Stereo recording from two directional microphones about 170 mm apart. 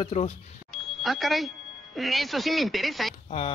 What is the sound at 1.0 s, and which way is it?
Speech, centre (ahead or behind).